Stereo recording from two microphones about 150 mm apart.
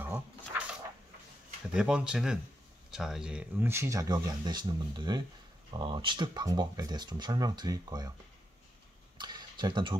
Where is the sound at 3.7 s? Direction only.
20° right (ahead or behind).